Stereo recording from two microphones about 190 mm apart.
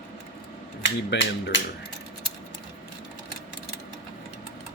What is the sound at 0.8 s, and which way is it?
Speech, 70° left (ahead or behind).